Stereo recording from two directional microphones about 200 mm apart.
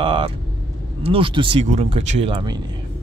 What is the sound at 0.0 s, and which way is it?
Vehicle, 25° right (ahead or behind).